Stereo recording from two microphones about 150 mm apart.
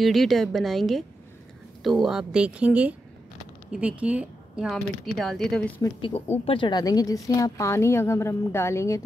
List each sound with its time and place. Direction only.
0.0 s speech: centre (ahead or behind)
4.0 s speech: 10° right (ahead or behind)
5.8 s a woman's voice: 35° left (ahead or behind); by 9.0 s 20° left (ahead or behind)